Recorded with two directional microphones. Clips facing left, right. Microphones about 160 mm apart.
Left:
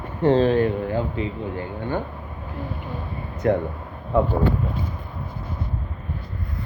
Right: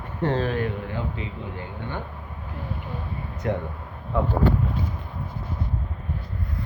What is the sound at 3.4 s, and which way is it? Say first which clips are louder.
Speech: left 7 dB; 50° left (ahead or behind).